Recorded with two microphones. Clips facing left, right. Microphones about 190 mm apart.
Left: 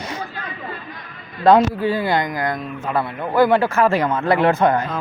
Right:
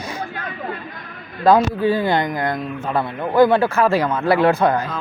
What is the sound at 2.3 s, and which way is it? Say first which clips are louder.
Speech: right 1 dB; 30° right (ahead or behind).